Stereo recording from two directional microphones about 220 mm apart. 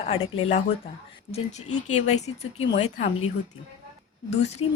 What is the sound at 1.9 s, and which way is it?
Speech, 30° left (ahead or behind).